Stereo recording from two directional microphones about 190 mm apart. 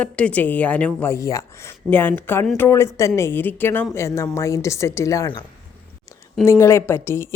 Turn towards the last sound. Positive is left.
turn(degrees=15)  # may be behind; listen again after turning